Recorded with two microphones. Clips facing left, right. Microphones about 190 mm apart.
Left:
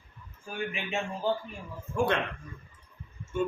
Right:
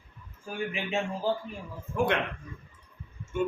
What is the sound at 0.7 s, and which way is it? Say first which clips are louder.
Speech: right 5 dB; 30° right (ahead or behind).